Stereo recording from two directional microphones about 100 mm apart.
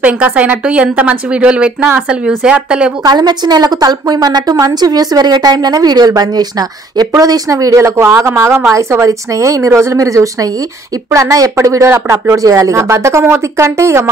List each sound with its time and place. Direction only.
0.0 s a woman's voice: 15° right (ahead or behind)
3.0 s a woman's voice: 45° right (ahead or behind); by 14.0 s 30° right (ahead or behind)